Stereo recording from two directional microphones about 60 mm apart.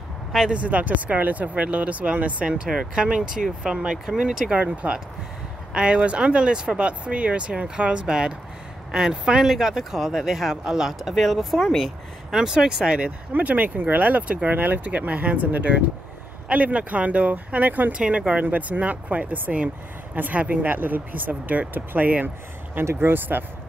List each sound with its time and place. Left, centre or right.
0.5 s speech: right
13.3 s speech: right
17.9 s speech: centre; by 23.4 s right